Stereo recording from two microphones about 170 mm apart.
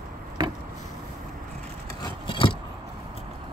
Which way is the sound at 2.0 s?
30° left (ahead or behind).